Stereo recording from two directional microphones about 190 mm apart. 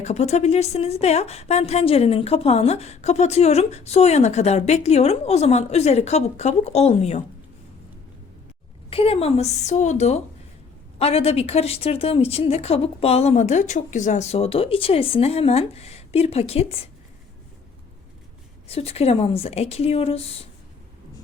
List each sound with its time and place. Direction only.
0.0 s a woman's voice: 35° left (ahead or behind)
8.9 s a woman's voice: 30° left (ahead or behind)
18.7 s a woman's voice: 30° left (ahead or behind)